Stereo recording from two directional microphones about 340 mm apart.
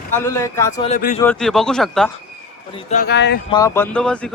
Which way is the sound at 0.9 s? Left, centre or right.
Left.